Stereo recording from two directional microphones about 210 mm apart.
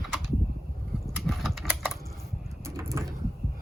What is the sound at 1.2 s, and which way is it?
Typing, centre (ahead or behind).